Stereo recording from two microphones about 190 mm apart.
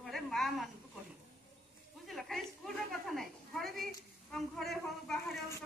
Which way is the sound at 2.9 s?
Centre (ahead or behind).